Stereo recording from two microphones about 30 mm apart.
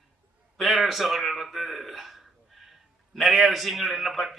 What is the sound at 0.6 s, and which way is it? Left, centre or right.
A man's voice, centre.